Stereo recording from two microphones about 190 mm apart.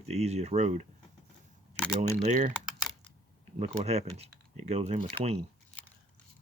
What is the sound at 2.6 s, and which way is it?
Typing, 5° right (ahead or behind).